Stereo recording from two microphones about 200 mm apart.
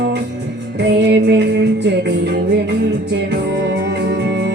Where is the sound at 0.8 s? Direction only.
60° right (ahead or behind).